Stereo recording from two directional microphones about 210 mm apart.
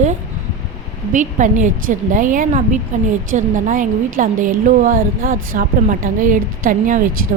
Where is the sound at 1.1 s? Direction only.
35° right (ahead or behind).